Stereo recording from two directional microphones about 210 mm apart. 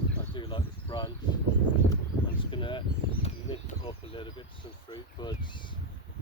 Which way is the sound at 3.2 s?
30° left (ahead or behind).